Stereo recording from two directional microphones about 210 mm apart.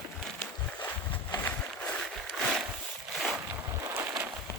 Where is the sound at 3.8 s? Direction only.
15° right (ahead or behind).